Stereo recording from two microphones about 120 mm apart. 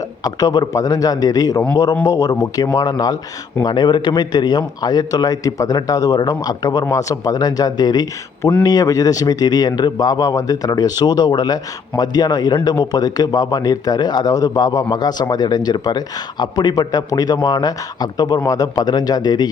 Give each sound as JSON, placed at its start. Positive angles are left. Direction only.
{"t": 0.3, "sound": "speech", "side_deg": 30}